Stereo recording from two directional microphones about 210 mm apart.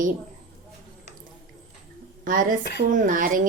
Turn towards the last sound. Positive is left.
turn(degrees=-40)  # may be behind; listen again after turning